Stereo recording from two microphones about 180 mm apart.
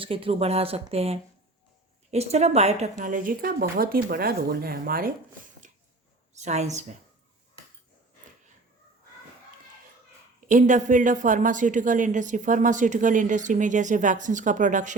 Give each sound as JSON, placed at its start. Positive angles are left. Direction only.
{"t": 0.0, "sound": "speech", "side_deg": -30}
{"t": 3.0, "sound": "speech", "side_deg": -50}
{"t": 6.3, "sound": "speech", "side_deg": -40}
{"t": 10.4, "sound": "speech", "side_deg": -45}